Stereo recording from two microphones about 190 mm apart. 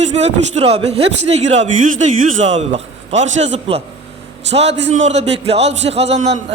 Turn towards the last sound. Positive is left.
turn(degrees=-35)  # may be behind; listen again after turning